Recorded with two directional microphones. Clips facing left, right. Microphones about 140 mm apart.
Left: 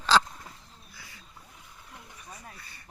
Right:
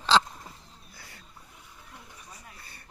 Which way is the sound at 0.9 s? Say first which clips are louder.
Right 1 dB; 55° right (ahead or behind).